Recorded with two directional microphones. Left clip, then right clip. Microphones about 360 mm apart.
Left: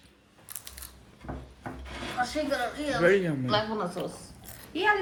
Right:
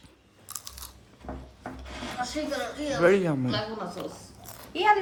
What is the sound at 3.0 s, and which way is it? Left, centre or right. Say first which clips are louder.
A woman's voice: right 2 dB; centre.